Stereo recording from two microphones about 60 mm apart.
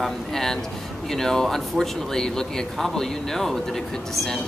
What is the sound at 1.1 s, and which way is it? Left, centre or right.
Speech, centre.